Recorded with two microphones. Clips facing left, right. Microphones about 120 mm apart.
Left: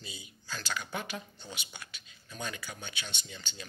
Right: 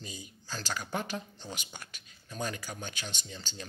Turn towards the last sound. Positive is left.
turn(degrees=-40)  # may be behind; listen again after turning